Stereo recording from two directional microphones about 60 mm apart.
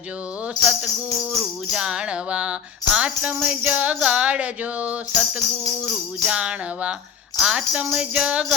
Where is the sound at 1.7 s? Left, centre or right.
Centre.